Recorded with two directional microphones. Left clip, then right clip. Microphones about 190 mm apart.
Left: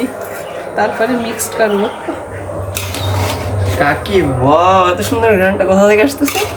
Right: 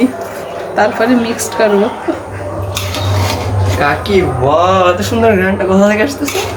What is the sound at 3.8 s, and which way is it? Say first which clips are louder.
A man's voice: right 1 dB; 20° left (ahead or behind).